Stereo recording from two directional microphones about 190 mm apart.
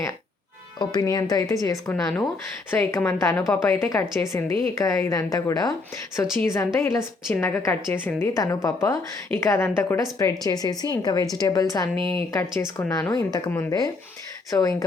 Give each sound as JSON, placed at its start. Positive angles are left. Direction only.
{"t": 0.8, "sound": "a woman's voice", "side_deg": 20}
{"t": 11.9, "sound": "speech", "side_deg": -25}
{"t": 12.3, "sound": "a woman's voice", "side_deg": 15}